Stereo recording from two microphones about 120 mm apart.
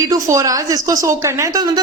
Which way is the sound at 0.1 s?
30° right (ahead or behind).